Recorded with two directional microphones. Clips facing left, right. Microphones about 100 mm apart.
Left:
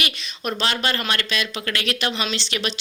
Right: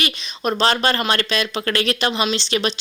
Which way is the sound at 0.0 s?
35° right (ahead or behind).